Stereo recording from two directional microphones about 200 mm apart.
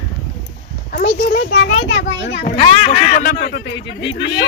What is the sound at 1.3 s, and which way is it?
Speech, 50° left (ahead or behind).